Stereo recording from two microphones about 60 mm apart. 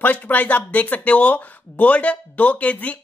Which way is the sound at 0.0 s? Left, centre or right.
Left.